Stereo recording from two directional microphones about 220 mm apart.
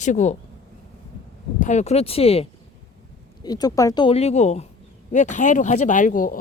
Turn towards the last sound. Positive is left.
turn(degrees=35)  # may be behind; listen again after turning